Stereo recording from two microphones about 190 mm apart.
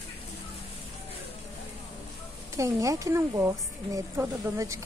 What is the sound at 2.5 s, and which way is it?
A woman's voice, 15° right (ahead or behind).